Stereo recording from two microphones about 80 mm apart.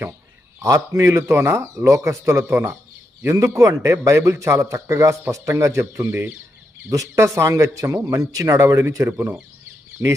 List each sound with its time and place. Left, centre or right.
0.6 s a man's voice: right
3.3 s a man's voice: right
6.9 s a man's voice: right
9.0 s speech: right